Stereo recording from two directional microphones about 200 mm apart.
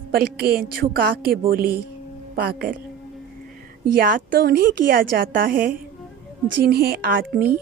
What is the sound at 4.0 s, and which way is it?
Speech, 45° right (ahead or behind).